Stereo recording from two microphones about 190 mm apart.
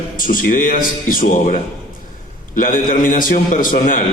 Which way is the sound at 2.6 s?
45° left (ahead or behind).